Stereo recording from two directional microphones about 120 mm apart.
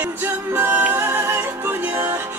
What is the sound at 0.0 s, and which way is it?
Music, 15° right (ahead or behind).